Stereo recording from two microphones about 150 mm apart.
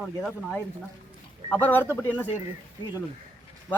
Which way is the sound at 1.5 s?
10° left (ahead or behind).